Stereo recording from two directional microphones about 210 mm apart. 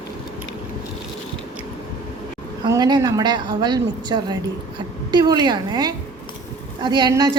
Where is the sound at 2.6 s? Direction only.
20° right (ahead or behind).